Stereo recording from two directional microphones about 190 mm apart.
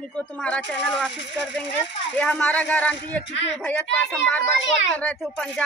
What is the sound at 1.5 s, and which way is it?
Speech, 70° left (ahead or behind).